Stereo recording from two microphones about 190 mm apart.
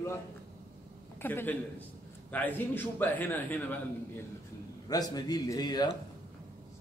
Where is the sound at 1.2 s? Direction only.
10° left (ahead or behind).